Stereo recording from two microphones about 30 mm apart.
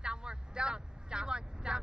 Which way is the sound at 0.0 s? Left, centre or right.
Right.